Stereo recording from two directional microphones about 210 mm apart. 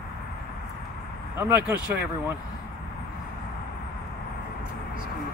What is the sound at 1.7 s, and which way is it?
Speech, 10° right (ahead or behind).